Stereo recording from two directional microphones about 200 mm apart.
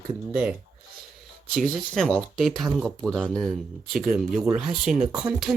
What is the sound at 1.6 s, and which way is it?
Speech, 5° left (ahead or behind).